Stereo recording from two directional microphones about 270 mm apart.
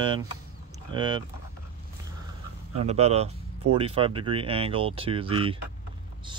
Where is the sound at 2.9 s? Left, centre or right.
Right.